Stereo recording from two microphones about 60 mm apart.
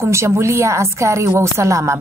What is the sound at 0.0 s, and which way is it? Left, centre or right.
A woman's voice, right.